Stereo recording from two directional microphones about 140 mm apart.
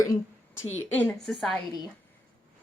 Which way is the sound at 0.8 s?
10° left (ahead or behind).